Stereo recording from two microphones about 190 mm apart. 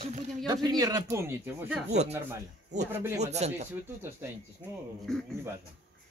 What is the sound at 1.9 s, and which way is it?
Speech, 35° right (ahead or behind).